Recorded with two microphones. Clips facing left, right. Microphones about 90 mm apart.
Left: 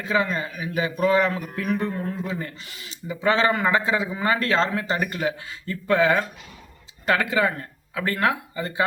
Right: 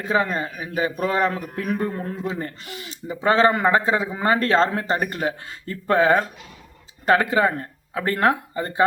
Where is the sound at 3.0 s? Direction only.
40° right (ahead or behind).